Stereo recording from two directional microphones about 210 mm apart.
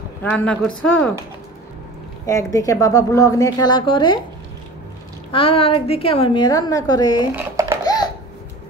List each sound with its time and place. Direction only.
0.2 s speech: 5° left (ahead or behind)
2.2 s a woman's voice: 15° left (ahead or behind)
5.3 s a woman's voice: 25° left (ahead or behind)
7.3 s babbling: 15° right (ahead or behind)
7.8 s a sound: 20° left (ahead or behind)